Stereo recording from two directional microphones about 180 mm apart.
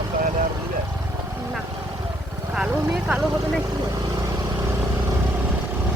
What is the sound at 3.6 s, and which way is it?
Vehicle, 20° right (ahead or behind).